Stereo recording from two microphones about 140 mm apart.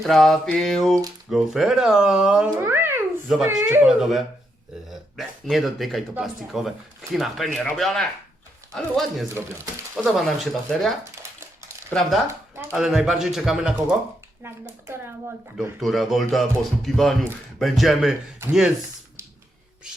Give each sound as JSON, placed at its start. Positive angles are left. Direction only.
{"t": 0.0, "sound": "speech", "side_deg": 0}
{"t": 2.6, "sound": "babbling", "side_deg": -15}
{"t": 3.2, "sound": "speech", "side_deg": 0}
{"t": 3.6, "sound": "speech", "side_deg": -15}
{"t": 3.8, "sound": "speech", "side_deg": 0}
{"t": 9.3, "sound": "speech", "side_deg": -15}
{"t": 10.1, "sound": "speech", "side_deg": 0}
{"t": 11.0, "sound": "a sound", "side_deg": -20}
{"t": 11.9, "sound": "speech", "side_deg": 5}
{"t": 14.4, "sound": "speech", "side_deg": -15}
{"t": 15.8, "sound": "speech", "side_deg": 0}